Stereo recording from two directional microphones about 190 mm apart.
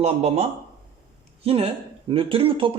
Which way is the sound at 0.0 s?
35° right (ahead or behind).